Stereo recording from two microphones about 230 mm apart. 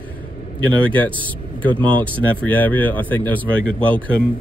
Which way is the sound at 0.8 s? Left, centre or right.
Centre.